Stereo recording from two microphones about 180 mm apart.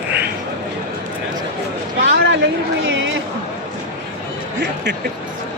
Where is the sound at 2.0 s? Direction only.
80° right.